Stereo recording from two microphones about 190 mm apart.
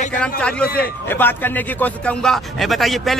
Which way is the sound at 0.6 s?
55° left (ahead or behind).